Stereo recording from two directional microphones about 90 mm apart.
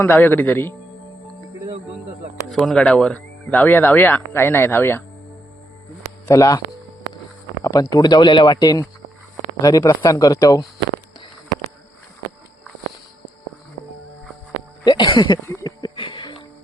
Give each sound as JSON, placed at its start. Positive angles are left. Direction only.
{"t": 0.0, "sound": "speech", "side_deg": 20}
{"t": 2.5, "sound": "speech", "side_deg": 5}
{"t": 6.2, "sound": "speech", "side_deg": 35}
{"t": 7.6, "sound": "a sound", "side_deg": 35}
{"t": 7.9, "sound": "speech", "side_deg": 50}
{"t": 8.5, "sound": "speech", "side_deg": 45}
{"t": 15.0, "sound": "speech", "side_deg": 65}
{"t": 16.0, "sound": "music", "side_deg": 70}